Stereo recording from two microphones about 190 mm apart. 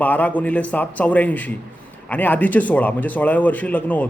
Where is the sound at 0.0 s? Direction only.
10° left (ahead or behind).